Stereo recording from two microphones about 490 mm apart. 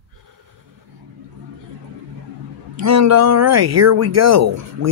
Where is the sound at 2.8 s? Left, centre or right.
Right.